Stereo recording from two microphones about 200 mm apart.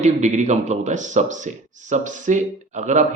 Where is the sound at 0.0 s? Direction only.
35° right (ahead or behind).